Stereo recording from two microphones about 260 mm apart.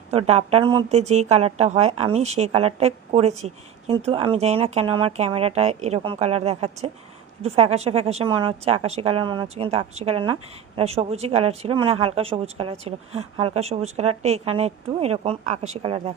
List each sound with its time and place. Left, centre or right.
0.1 s a woman's voice: right